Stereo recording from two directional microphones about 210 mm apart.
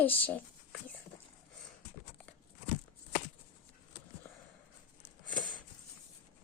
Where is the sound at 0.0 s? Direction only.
10° left (ahead or behind).